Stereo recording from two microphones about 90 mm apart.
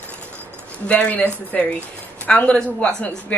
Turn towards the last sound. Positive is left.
turn(degrees=15)  # may be behind; listen again after turning